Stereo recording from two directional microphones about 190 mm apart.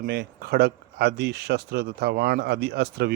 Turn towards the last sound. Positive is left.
turn(degrees=-55)  # may be behind; listen again after turning